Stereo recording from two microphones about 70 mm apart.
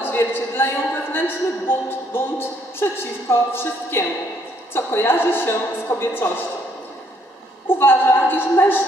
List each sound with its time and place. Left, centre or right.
0.0 s a woman's voice: left
7.8 s a woman's voice: left